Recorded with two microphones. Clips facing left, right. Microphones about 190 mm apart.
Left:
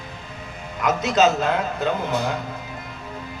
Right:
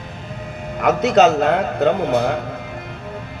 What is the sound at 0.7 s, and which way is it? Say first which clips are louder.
A man's voice: right 6 dB; 65° right (ahead or behind).